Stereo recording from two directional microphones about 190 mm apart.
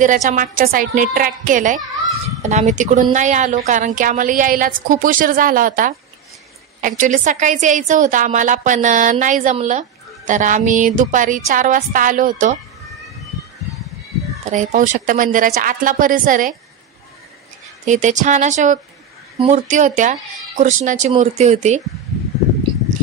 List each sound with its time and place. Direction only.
0.0 s a woman's voice: 40° right (ahead or behind)
14.5 s a woman's voice: 40° right (ahead or behind)
17.8 s a woman's voice: 40° right (ahead or behind)